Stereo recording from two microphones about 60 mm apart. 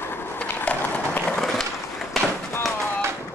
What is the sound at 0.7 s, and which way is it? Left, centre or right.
Run, left.